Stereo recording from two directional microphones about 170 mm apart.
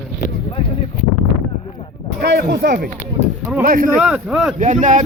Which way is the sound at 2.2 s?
75° right (ahead or behind).